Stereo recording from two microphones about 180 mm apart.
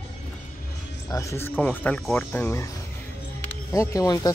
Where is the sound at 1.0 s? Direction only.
15° left (ahead or behind).